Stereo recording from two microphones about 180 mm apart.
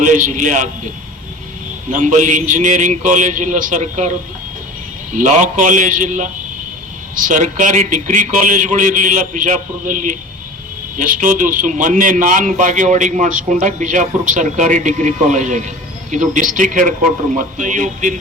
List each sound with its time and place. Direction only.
0.0 s a man's voice: 45° right (ahead or behind)
1.9 s a man's voice: 45° right (ahead or behind)
5.1 s a man's voice: 45° right (ahead or behind)